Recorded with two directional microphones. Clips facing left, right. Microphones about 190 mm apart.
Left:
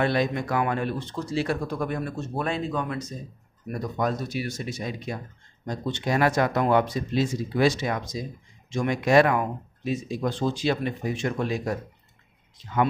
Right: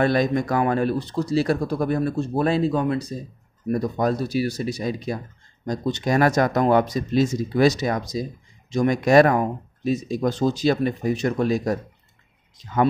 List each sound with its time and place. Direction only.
0.0 s speech: 40° right (ahead or behind)